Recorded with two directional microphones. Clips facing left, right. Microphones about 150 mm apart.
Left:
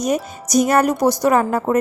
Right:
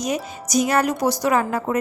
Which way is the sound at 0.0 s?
45° left (ahead or behind).